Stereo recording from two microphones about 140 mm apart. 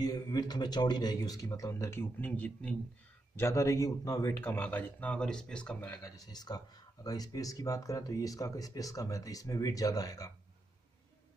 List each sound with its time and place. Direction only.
0.0 s speech: 30° left (ahead or behind); by 2.8 s 10° left (ahead or behind)
3.3 s a man's voice: 20° left (ahead or behind)
5.9 s speech: 25° left (ahead or behind)